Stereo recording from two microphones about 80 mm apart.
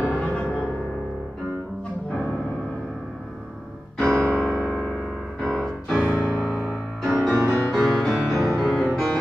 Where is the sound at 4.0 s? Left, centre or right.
Centre.